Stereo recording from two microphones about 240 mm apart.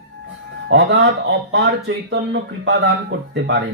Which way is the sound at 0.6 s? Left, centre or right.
Right.